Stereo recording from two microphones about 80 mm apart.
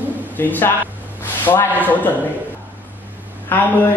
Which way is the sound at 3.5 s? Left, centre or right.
Left.